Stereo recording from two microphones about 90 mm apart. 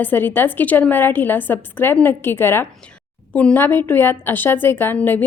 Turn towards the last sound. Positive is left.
turn(degrees=20)  # may be behind; listen again after turning